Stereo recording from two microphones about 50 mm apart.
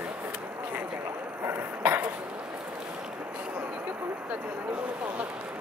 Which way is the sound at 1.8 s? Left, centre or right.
Right.